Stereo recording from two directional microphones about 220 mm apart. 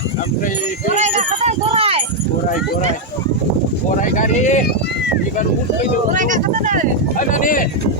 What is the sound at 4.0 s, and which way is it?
Speech, 35° left (ahead or behind).